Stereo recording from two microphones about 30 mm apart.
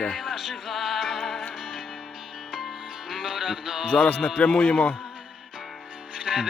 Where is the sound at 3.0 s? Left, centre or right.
Centre.